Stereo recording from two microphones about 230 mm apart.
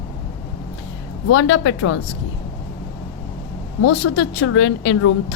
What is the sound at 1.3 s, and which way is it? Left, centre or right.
Speech, left.